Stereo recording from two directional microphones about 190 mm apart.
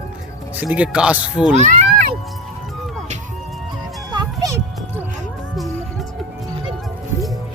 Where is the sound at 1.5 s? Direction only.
40° right (ahead or behind).